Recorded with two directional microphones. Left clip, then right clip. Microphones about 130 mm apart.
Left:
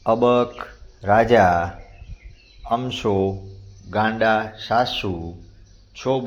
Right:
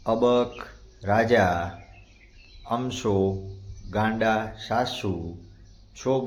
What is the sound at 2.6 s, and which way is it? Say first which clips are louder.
Speech: left 5 dB; 10° left (ahead or behind).